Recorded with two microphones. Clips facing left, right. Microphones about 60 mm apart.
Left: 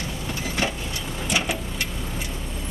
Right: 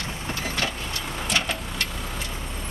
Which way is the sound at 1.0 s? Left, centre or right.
Right.